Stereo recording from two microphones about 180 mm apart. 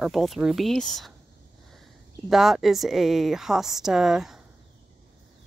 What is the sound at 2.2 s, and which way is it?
Speech, centre (ahead or behind).